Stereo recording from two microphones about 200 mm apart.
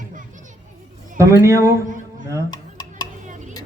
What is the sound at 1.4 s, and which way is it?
Speech, 15° right (ahead or behind).